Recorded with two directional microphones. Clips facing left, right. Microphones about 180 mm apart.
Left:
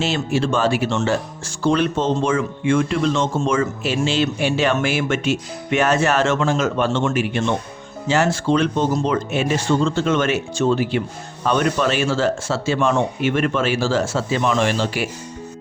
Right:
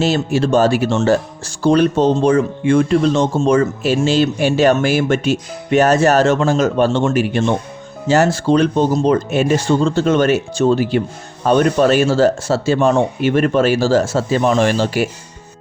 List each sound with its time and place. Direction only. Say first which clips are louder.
0.0 s speech: right 5 dB; 40° right (ahead or behind)